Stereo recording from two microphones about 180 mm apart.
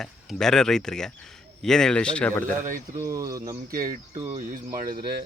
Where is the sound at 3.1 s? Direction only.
20° right (ahead or behind).